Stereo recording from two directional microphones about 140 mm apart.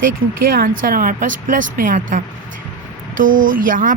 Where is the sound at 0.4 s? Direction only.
90° right.